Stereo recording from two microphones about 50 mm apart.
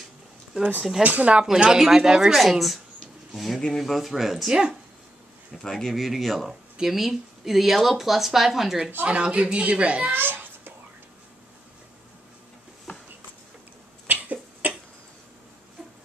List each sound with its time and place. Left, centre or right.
1.0 s a woman's voice: right
1.4 s speech: centre
5.6 s speech: centre
5.9 s speech: centre
9.0 s a woman's voice: right
10.1 s babbling: right
12.9 s a sound: left
14.0 s cough: right